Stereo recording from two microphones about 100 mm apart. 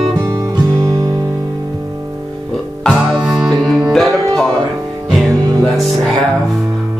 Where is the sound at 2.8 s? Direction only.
Centre (ahead or behind).